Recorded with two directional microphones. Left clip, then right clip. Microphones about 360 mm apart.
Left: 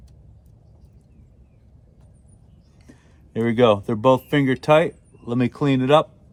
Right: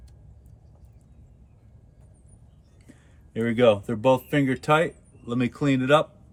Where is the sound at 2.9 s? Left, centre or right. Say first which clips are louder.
Left 5 dB; centre.